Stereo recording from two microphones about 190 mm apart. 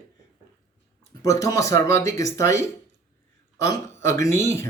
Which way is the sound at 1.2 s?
15° left (ahead or behind).